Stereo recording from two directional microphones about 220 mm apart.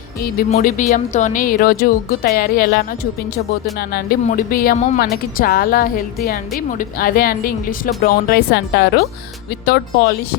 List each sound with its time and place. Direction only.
0.2 s speech: 40° left (ahead or behind)